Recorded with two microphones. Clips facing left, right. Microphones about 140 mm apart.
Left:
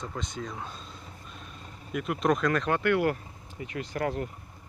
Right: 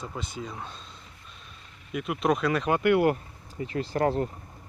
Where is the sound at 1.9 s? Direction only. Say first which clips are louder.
Even; 5° right (ahead or behind).